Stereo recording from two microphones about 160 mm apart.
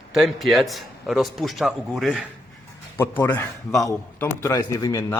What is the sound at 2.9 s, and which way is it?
A man's voice, 15° left (ahead or behind).